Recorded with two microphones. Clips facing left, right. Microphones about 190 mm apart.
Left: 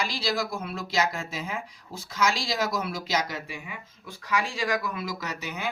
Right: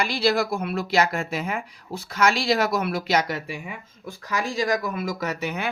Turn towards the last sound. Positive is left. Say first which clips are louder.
# right 7 dB
turn(degrees=-60)  # may be behind; listen again after turning